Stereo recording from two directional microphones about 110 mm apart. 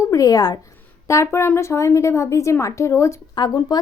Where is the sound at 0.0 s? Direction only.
30° left (ahead or behind).